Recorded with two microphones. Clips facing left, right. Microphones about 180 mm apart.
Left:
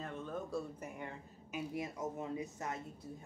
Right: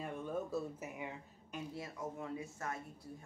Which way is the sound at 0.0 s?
10° right (ahead or behind).